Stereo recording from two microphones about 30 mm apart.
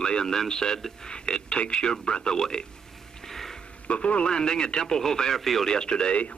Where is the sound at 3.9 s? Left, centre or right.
Left.